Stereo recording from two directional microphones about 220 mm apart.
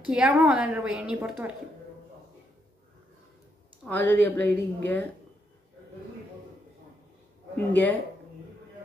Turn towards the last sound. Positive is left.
turn(degrees=10)  # may be behind; listen again after turning